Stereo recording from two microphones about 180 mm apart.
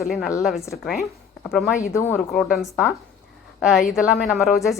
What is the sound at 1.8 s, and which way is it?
Speech, 15° left (ahead or behind).